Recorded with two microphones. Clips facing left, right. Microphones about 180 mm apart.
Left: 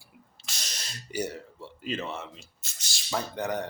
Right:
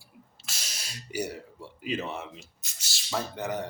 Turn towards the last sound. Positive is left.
turn(degrees=-5)  # may be behind; listen again after turning